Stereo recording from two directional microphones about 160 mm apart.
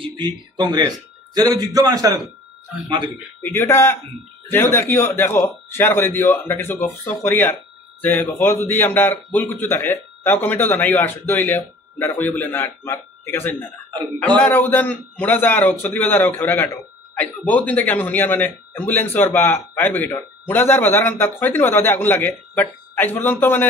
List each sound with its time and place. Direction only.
0.0 s speech: 25° right (ahead or behind)
3.4 s a man's voice: 15° left (ahead or behind)